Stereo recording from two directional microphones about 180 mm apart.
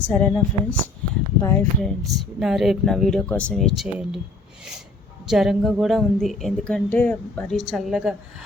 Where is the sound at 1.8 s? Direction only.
Centre (ahead or behind).